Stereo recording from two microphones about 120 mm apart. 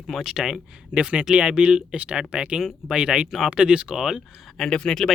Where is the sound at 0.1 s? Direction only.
5° right (ahead or behind).